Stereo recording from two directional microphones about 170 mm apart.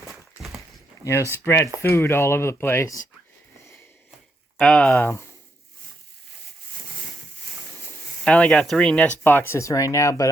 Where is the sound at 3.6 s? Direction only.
15° left (ahead or behind).